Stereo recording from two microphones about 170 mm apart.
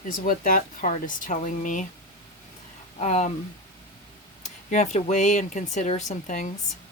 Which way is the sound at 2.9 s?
40° left (ahead or behind).